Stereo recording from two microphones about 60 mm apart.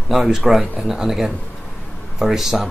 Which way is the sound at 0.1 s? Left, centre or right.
Centre.